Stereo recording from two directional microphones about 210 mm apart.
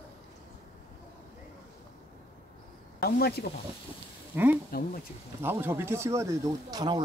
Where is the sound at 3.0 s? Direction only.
50° left (ahead or behind).